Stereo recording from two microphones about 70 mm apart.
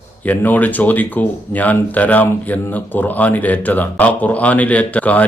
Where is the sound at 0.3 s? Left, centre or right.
Left.